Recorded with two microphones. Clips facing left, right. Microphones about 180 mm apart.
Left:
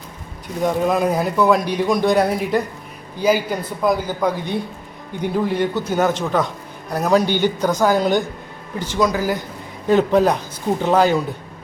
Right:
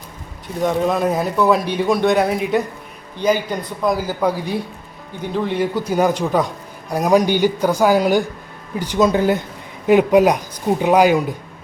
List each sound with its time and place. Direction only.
0.6 s a man's voice: centre (ahead or behind)
3.9 s speech: 10° right (ahead or behind)
5.2 s a man's voice: 10° left (ahead or behind)
5.5 s speech: 10° right (ahead or behind)
9.0 s speech: 25° right (ahead or behind)
9.8 s speech: 15° right (ahead or behind)